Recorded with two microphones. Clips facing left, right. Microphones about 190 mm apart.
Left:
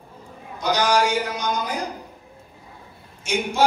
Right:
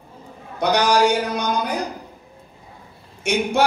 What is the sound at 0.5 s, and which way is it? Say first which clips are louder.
Speech: right 2 dB; 65° right (ahead or behind).